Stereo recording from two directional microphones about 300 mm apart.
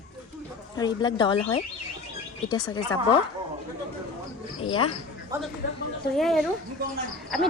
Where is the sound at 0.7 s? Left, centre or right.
Centre.